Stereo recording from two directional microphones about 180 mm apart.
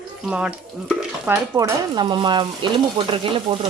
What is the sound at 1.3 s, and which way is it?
Stir, 20° right (ahead or behind).